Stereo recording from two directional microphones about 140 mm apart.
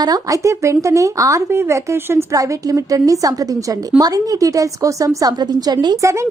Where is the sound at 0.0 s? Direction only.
25° right (ahead or behind).